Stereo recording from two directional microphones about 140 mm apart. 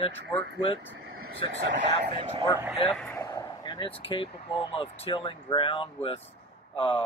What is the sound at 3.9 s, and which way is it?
Speech, 40° left (ahead or behind).